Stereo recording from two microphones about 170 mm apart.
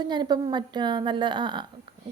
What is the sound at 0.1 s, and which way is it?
A woman's voice, 25° right (ahead or behind).